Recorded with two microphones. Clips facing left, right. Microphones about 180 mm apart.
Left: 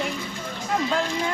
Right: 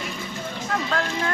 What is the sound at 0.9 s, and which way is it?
Music, 15° left (ahead or behind).